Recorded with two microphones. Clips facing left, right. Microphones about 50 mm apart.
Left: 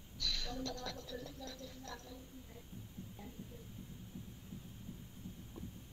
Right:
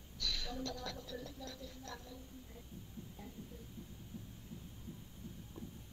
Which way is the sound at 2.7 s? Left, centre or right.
Left.